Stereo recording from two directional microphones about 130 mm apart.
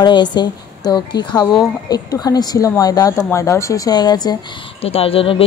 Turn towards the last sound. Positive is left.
turn(degrees=45)  # may be behind; listen again after turning